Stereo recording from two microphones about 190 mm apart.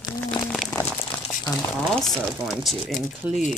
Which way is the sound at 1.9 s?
Centre (ahead or behind).